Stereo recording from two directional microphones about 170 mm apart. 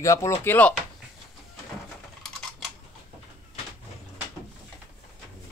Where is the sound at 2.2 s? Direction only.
Centre (ahead or behind).